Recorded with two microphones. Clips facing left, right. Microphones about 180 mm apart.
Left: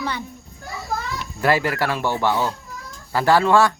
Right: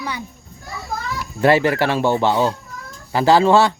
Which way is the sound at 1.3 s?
25° right (ahead or behind).